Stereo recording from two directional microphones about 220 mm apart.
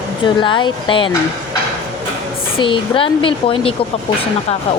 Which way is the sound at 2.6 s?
25° left (ahead or behind).